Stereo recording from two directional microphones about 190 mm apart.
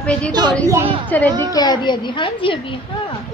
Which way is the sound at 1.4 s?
20° left (ahead or behind).